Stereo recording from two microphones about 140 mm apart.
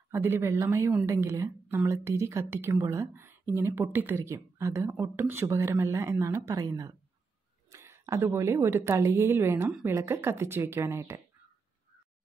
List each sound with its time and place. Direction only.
0.1 s a woman's voice: 20° right (ahead or behind)